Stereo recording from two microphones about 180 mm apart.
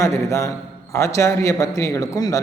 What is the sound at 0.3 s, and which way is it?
A man's voice, 15° left (ahead or behind).